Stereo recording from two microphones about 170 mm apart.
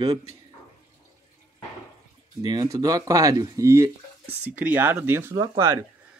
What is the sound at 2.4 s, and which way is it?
Speech, 20° right (ahead or behind).